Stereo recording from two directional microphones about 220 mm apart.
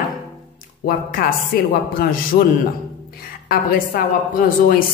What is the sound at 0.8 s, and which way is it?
Speech, 40° left (ahead or behind).